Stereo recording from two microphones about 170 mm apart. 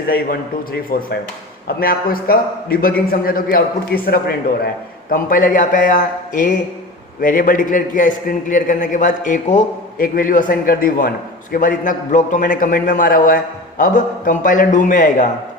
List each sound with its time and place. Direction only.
0.1 s a man's voice: 60° left (ahead or behind)